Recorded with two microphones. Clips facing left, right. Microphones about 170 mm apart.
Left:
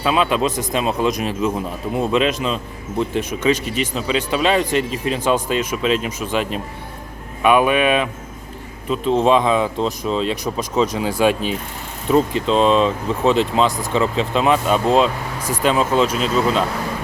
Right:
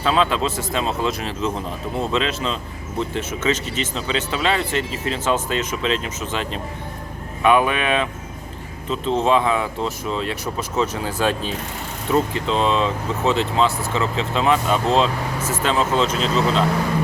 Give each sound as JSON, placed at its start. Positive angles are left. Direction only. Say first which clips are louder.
{"t": 0.0, "sound": "speech", "louder": "left 2 dB", "side_deg": 15}